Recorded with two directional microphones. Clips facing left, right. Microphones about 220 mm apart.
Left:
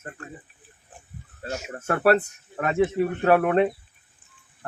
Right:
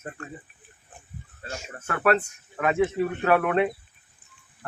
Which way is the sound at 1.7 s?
40° left (ahead or behind).